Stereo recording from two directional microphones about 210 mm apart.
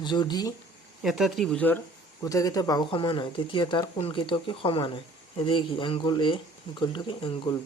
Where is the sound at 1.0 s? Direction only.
Centre (ahead or behind).